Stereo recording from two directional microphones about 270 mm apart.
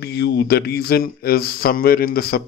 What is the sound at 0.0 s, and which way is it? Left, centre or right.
A man's voice, left.